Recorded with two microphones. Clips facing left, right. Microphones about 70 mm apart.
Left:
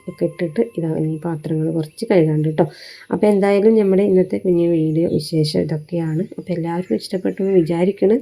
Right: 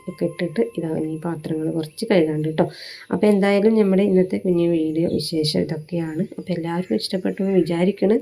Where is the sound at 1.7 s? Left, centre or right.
Left.